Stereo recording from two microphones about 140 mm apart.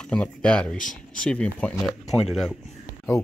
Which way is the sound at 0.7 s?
70° left (ahead or behind).